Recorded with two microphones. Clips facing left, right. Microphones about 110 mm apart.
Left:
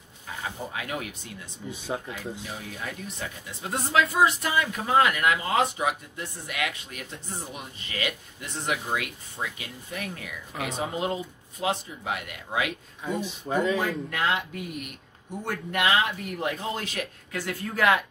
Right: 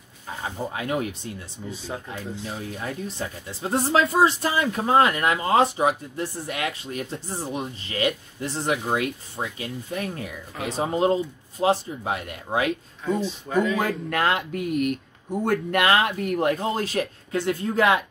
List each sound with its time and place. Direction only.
0.7 s speech: 30° right (ahead or behind)
2.5 s speech: 30° right (ahead or behind)
13.2 s speech: 20° left (ahead or behind)
13.7 s speech: 55° right (ahead or behind)
16.5 s speech: 35° right (ahead or behind)